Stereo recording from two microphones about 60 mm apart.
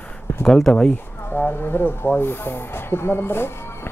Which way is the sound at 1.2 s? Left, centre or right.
Left.